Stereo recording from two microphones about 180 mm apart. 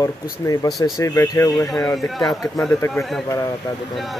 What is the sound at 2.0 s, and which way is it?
A man's voice, centre (ahead or behind).